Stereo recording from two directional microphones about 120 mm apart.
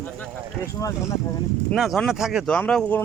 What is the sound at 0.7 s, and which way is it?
Speech, 30° left (ahead or behind).